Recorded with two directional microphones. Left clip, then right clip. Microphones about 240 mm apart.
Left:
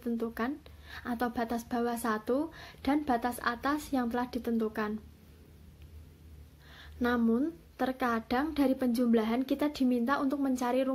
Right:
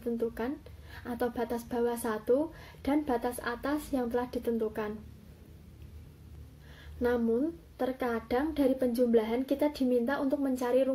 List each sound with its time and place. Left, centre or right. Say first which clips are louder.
0.2 s speech: right 1 dB; left
7.0 s speech: right 1 dB; left